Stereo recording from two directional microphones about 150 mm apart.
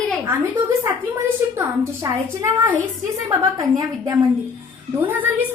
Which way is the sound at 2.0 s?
15° right (ahead or behind).